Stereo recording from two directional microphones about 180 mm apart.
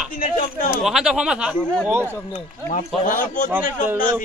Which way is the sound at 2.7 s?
45° left (ahead or behind).